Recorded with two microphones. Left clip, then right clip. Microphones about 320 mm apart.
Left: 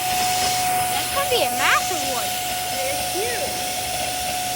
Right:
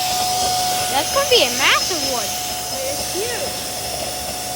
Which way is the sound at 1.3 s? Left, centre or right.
Centre.